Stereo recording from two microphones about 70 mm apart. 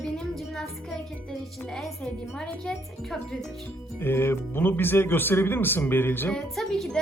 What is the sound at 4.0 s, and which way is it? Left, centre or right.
Speech, left.